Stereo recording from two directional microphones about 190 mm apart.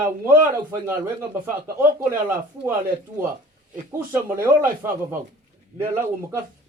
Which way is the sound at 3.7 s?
10° right (ahead or behind).